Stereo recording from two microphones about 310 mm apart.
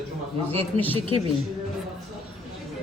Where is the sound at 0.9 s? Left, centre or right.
Centre.